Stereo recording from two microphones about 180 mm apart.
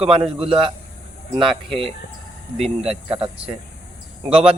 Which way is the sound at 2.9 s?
35° right (ahead or behind).